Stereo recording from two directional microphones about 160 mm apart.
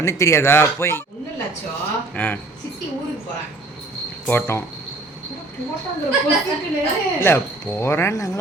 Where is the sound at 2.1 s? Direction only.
10° left (ahead or behind).